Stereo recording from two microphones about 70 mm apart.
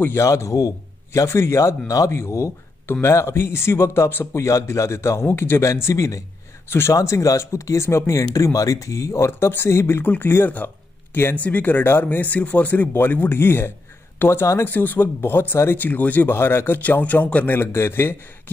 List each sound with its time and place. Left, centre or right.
0.1 s a man's voice: left
10.0 s speech: left
17.6 s speech: left